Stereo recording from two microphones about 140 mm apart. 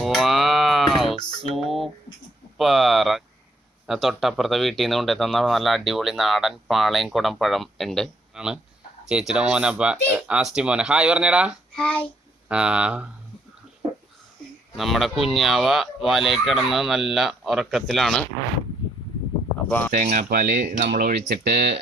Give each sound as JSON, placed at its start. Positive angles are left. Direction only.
{"t": 0.0, "sound": "music", "side_deg": 0}
{"t": 1.4, "sound": "a sound", "side_deg": 0}
{"t": 2.6, "sound": "speech", "side_deg": 0}
{"t": 11.8, "sound": "child singing", "side_deg": 5}
{"t": 12.5, "sound": "speech", "side_deg": -5}
{"t": 14.8, "sound": "speech", "side_deg": 0}
{"t": 19.9, "sound": "speech", "side_deg": -65}